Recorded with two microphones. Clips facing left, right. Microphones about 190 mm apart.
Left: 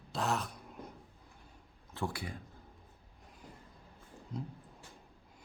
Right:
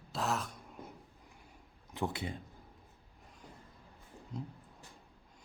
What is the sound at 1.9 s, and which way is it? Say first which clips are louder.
Speech: right 2 dB; 20° right (ahead or behind).